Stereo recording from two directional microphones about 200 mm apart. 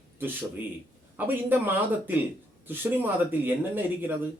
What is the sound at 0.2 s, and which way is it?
A man's voice, 10° right (ahead or behind).